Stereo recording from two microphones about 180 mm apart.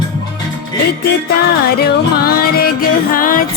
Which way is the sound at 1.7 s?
55° left (ahead or behind).